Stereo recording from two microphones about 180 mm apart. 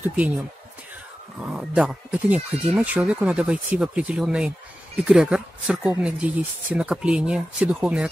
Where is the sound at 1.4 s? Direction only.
5° right (ahead or behind).